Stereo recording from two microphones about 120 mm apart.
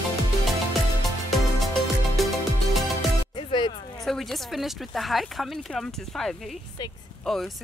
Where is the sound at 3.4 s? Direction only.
40° left (ahead or behind).